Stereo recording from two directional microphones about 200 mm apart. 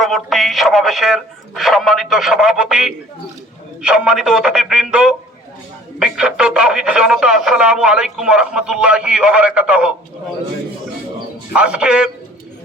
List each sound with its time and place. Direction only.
0.0 s speech: centre (ahead or behind)
11.5 s speech: 5° right (ahead or behind)